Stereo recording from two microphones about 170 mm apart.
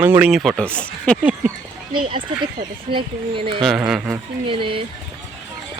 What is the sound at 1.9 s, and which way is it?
Speech, 30° right (ahead or behind).